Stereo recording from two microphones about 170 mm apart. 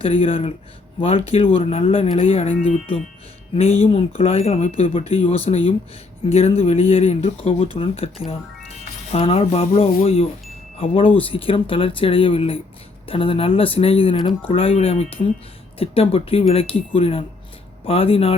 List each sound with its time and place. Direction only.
0.0 s speech: 30° left (ahead or behind)